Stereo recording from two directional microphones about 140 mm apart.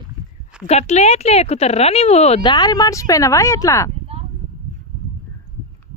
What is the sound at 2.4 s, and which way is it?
Speech, 30° left (ahead or behind).